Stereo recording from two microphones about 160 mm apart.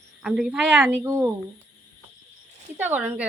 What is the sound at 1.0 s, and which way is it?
Speech, 20° right (ahead or behind).